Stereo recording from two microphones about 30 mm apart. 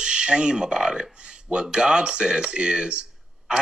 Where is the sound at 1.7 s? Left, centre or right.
Right.